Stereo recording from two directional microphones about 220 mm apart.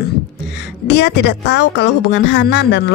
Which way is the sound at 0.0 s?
50° left (ahead or behind).